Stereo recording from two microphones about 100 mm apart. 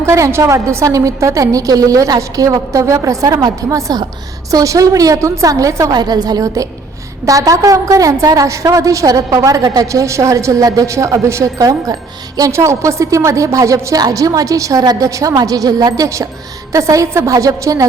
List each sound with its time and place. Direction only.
0.0 s a woman's voice: 30° right (ahead or behind)